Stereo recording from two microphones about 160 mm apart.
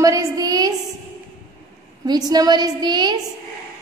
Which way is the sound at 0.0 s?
20° right (ahead or behind).